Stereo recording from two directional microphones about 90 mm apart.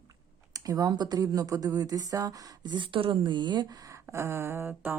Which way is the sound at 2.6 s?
60° right (ahead or behind).